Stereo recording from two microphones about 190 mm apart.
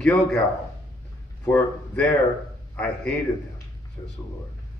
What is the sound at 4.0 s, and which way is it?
Speech, 25° left (ahead or behind).